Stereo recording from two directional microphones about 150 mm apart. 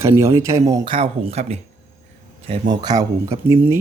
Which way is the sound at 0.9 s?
40° right (ahead or behind).